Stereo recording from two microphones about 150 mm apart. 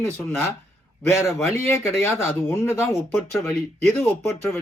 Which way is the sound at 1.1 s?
20° left (ahead or behind).